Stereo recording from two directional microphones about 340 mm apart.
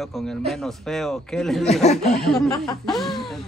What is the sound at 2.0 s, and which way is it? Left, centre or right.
Speech, centre.